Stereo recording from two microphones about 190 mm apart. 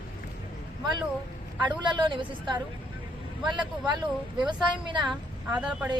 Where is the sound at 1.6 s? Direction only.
25° right (ahead or behind).